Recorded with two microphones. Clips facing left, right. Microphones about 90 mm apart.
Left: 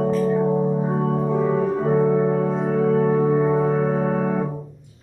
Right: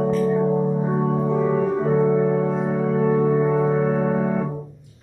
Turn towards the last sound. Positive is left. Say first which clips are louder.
# even
turn(degrees=5)  # may be behind; listen again after turning